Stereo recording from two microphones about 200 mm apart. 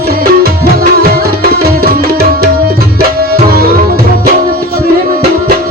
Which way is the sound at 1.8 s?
50° right (ahead or behind).